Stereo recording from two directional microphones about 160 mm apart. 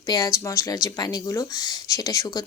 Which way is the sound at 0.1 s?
25° left (ahead or behind).